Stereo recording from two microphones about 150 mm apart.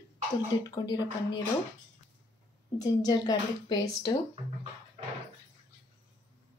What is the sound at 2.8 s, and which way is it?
A woman's voice, 25° left (ahead or behind).